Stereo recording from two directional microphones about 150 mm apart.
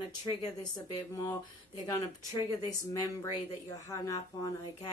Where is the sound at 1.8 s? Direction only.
25° left (ahead or behind).